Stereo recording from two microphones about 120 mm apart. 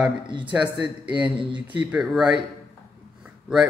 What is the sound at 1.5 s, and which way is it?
A man's voice, 10° right (ahead or behind).